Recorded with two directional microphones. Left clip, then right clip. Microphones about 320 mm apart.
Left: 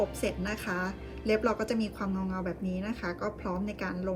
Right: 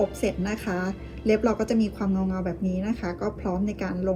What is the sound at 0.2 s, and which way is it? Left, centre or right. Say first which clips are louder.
Speech: right 5 dB; centre.